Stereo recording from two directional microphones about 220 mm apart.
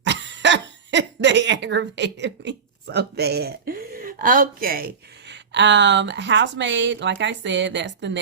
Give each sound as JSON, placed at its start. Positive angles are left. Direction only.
{"t": 0.0, "sound": "speech", "side_deg": -55}
{"t": 5.3, "sound": "speech", "side_deg": -55}